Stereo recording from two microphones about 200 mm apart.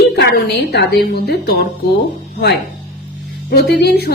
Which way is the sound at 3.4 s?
50° left (ahead or behind).